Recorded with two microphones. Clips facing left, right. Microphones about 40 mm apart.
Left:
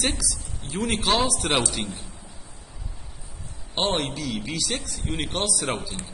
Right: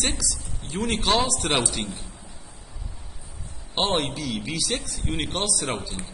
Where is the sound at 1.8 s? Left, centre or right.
Left.